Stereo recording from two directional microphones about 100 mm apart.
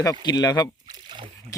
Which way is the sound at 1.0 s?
55° right (ahead or behind).